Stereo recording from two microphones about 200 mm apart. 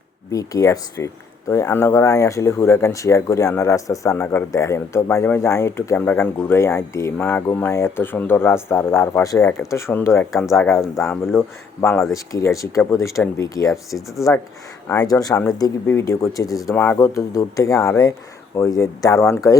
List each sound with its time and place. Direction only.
0.3 s speech: 15° left (ahead or behind)
10.3 s speech: centre (ahead or behind)
10.9 s speech: 10° left (ahead or behind)
14.8 s speech: 15° left (ahead or behind)